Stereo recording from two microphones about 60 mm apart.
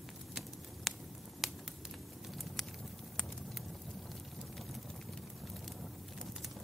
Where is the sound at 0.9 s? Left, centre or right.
Centre.